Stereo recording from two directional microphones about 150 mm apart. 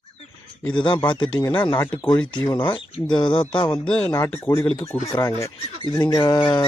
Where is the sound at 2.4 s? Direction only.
30° left (ahead or behind).